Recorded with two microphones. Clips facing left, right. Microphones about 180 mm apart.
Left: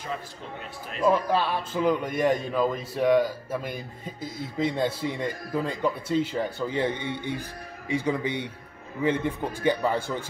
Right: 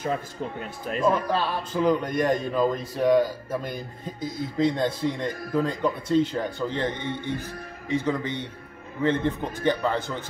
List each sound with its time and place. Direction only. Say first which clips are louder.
1.0 s a man's voice: left 1 dB; 5° left (ahead or behind)